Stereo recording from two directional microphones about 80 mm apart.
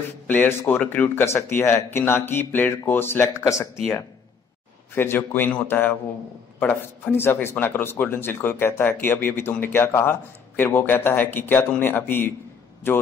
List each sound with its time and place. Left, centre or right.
0.3 s a man's voice: left
4.9 s a man's voice: left